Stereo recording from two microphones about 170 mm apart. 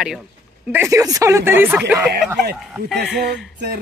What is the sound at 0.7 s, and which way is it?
Speech, 15° right (ahead or behind).